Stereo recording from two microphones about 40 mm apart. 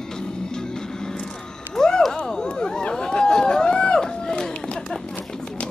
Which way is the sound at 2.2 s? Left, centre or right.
Centre.